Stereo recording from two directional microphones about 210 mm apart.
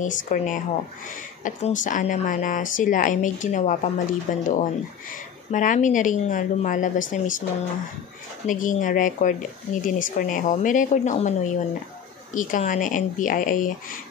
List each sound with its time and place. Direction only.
0.0 s a woman's voice: 40° left (ahead or behind)
8.5 s a woman's voice: 40° left (ahead or behind)